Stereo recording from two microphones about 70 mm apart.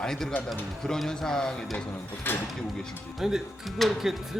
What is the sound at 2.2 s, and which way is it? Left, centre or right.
Speech, left.